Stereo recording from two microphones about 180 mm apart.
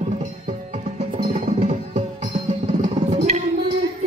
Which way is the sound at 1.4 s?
35° right (ahead or behind).